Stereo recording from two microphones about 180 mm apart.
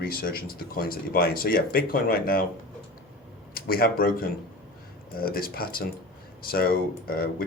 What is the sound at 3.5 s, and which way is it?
Speech, 55° left (ahead or behind).